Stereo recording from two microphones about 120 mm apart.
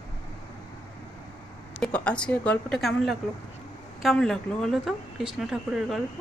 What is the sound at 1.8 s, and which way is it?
A woman's voice, 10° left (ahead or behind).